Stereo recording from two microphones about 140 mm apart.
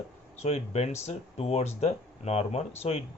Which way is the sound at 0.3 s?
50° left (ahead or behind).